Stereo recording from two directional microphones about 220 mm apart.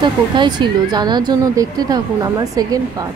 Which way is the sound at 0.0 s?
20° right (ahead or behind).